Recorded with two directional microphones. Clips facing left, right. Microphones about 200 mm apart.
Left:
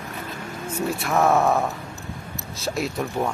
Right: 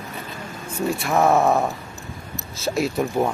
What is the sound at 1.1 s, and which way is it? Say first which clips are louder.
Speech: right 2 dB; 15° right (ahead or behind).